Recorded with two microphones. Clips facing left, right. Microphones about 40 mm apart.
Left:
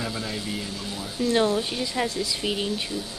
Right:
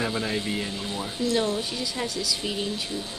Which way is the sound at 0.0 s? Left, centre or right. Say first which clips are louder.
Right 3 dB; right.